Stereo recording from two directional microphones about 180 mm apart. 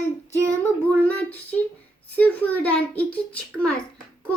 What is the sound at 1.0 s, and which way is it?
A child's voice, 10° left (ahead or behind).